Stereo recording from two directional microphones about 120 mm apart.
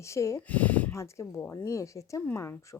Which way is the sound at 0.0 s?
25° left (ahead or behind).